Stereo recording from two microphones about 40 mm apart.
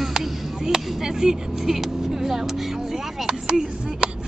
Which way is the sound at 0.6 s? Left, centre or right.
Centre.